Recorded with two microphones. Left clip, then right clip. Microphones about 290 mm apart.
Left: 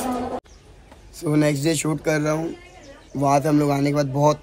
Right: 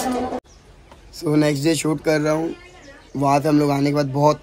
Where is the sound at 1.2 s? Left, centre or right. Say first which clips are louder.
Right 2 dB; centre.